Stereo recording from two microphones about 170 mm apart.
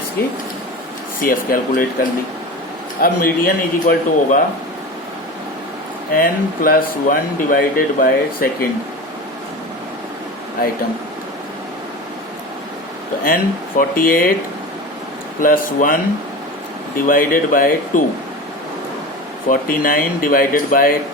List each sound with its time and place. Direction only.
1.2 s speech: 55° left (ahead or behind)
3.0 s speech: 60° left (ahead or behind)
6.1 s speech: 55° left (ahead or behind)
13.2 s speech: 55° left (ahead or behind)
15.4 s speech: 55° left (ahead or behind)
17.1 s speech: 55° left (ahead or behind)
19.5 s speech: 55° left (ahead or behind)